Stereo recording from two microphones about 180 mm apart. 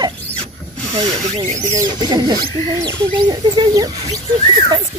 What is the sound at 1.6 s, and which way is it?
Speech, 15° right (ahead or behind).